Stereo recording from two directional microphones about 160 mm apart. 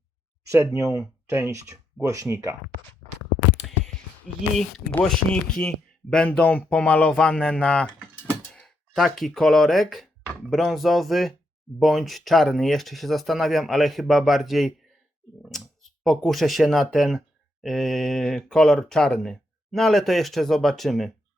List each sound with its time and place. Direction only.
0.4 s speech: 15° right (ahead or behind)
3.6 s a sound: centre (ahead or behind)
4.5 s speech: 5° left (ahead or behind)